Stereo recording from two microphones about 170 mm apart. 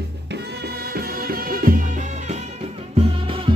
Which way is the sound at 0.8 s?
65° right (ahead or behind).